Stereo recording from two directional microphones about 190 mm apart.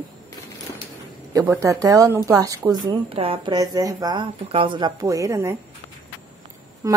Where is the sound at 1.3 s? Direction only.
15° right (ahead or behind).